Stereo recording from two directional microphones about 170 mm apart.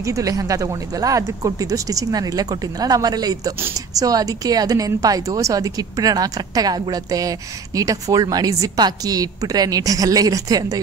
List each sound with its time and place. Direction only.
0.0 s speech: 20° right (ahead or behind)